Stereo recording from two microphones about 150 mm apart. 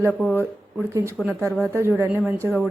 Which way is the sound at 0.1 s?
10° left (ahead or behind).